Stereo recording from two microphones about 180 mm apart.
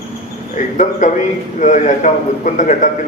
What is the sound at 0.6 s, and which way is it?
A man's voice, 40° left (ahead or behind).